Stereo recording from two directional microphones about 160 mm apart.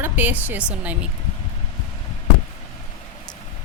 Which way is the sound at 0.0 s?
10° right (ahead or behind).